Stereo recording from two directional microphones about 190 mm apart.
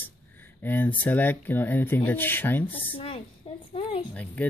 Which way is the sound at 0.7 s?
10° left (ahead or behind).